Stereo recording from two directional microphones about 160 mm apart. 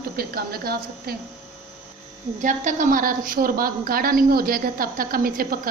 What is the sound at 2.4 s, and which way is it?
A woman's voice, 55° right (ahead or behind).